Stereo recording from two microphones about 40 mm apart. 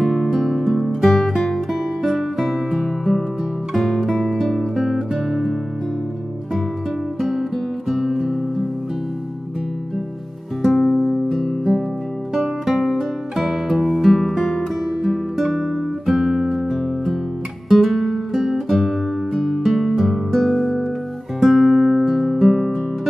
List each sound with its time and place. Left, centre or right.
0.0 s music: centre
7.2 s music: centre
10.6 s music: centre
11.2 s guitar: centre
12.4 s music: centre
21.4 s guitar: centre
22.0 s music: centre